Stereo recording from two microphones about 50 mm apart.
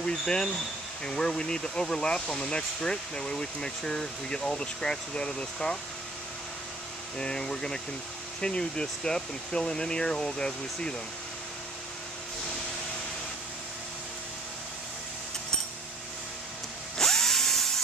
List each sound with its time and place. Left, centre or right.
0.0 s speech: centre
7.2 s speech: centre
17.0 s drill: centre